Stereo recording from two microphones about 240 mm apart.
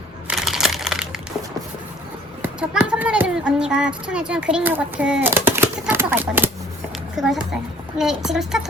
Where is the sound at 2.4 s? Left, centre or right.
Centre.